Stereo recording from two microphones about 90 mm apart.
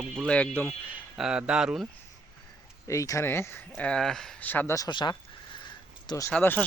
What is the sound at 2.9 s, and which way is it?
Speech, 35° left (ahead or behind).